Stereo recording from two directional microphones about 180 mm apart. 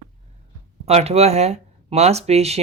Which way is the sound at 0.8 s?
35° right (ahead or behind).